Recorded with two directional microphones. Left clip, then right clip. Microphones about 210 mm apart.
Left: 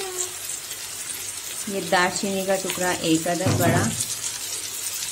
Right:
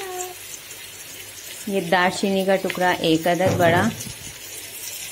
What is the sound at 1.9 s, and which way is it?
Speech, 15° right (ahead or behind).